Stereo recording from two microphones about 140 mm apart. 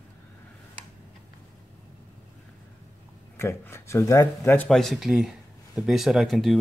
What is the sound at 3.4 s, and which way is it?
Speech, 20° left (ahead or behind).